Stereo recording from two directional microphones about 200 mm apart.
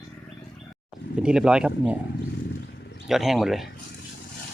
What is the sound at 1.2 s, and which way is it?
Speech, 5° right (ahead or behind).